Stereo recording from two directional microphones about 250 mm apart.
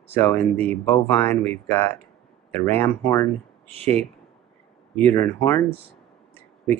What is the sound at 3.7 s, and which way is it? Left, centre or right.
Speech, right.